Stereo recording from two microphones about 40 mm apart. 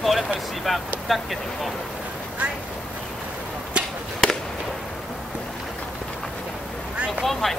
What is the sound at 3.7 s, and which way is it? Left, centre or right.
Chop, right.